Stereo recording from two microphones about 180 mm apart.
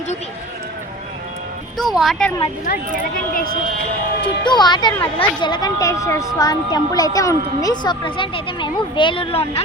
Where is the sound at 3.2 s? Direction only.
50° left (ahead or behind).